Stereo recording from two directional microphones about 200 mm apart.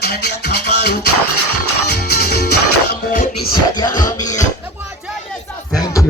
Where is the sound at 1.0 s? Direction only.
90° left.